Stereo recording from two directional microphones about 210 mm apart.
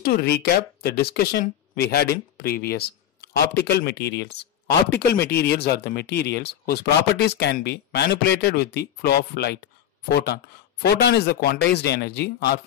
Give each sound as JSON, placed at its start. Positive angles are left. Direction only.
{"t": 0.0, "sound": "speech", "side_deg": 45}